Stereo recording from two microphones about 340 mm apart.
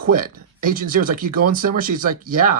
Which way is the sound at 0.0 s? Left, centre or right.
Right.